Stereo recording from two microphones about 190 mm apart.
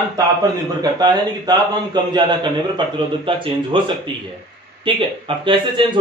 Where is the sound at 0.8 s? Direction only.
20° right (ahead or behind).